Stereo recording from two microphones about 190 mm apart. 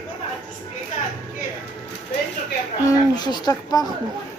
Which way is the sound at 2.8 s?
20° left (ahead or behind).